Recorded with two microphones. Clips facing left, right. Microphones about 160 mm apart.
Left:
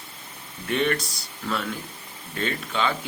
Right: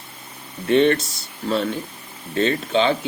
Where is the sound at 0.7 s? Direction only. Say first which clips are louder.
Right 8 dB; 25° right (ahead or behind).